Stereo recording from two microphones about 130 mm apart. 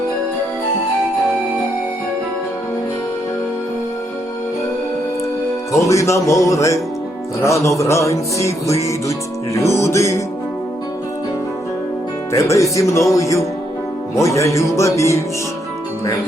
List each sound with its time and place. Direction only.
5.7 s music: 25° left (ahead or behind)
12.3 s music: 25° left (ahead or behind)